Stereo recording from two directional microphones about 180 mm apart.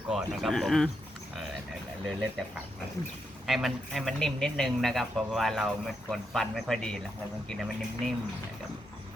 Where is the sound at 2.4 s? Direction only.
5° left (ahead or behind).